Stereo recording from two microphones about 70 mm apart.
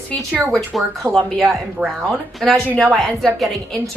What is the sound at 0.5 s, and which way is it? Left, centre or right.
Speech, centre.